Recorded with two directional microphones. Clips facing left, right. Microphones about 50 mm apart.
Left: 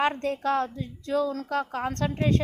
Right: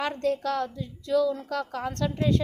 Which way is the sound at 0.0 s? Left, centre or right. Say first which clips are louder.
Left 1 dB; left.